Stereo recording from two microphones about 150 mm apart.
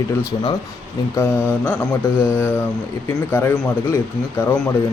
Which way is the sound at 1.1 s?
15° left (ahead or behind).